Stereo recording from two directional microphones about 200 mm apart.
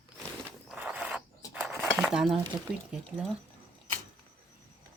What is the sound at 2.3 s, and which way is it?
Speech, 25° right (ahead or behind).